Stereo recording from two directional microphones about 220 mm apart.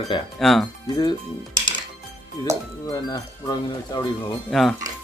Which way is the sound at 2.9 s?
15° left (ahead or behind).